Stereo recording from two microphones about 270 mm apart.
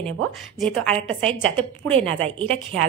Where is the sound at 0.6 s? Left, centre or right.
Centre.